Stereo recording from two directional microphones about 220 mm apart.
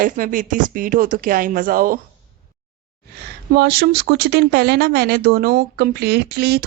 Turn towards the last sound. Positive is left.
turn(degrees=-45)  # may be behind; listen again after turning